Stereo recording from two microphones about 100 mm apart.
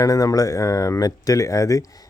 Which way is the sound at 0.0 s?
35° left (ahead or behind).